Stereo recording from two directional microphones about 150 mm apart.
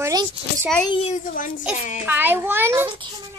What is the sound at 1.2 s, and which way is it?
Speech, 60° left (ahead or behind).